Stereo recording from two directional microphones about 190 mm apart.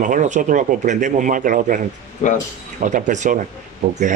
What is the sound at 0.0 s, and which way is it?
A man's voice, 40° right (ahead or behind).